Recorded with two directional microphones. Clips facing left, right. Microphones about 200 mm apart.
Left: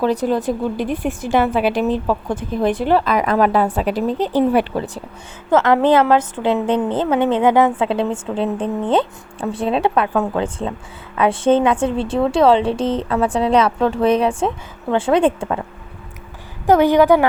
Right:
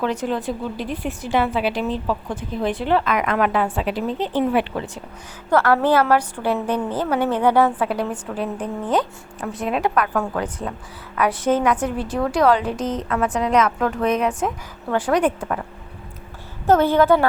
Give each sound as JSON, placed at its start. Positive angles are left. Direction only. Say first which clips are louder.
{"t": 0.0, "sound": "a woman's voice", "louder": "left 5 dB", "side_deg": 35}
{"t": 5.5, "sound": "a woman's voice", "louder": "left 3 dB", "side_deg": 20}
{"t": 16.6, "sound": "a woman's voice", "louder": "left 3 dB", "side_deg": 15}